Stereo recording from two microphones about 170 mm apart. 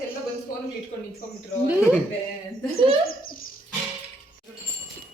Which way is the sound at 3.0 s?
60° left (ahead or behind).